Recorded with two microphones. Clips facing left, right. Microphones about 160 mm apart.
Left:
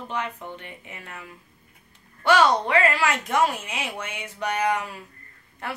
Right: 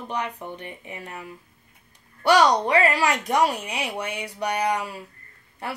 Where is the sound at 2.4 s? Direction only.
15° right (ahead or behind).